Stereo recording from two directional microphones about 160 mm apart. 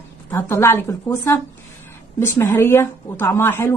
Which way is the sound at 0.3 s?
15° left (ahead or behind).